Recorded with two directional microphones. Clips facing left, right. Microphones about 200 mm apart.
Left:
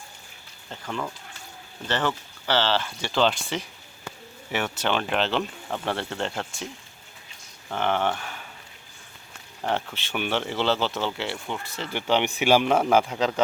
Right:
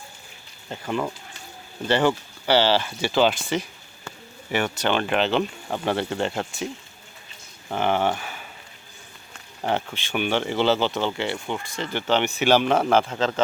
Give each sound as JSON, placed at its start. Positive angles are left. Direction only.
{"t": 0.7, "sound": "speech", "side_deg": -15}
{"t": 7.7, "sound": "speech", "side_deg": -10}
{"t": 9.6, "sound": "speech", "side_deg": -5}